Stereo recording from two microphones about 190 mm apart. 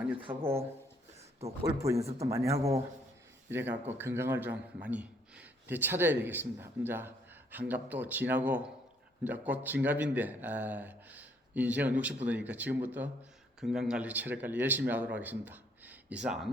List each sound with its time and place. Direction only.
0.3 s speech: 10° right (ahead or behind)
1.4 s speech: 30° right (ahead or behind)
1.8 s speech: 15° right (ahead or behind)
3.8 s speech: 10° right (ahead or behind)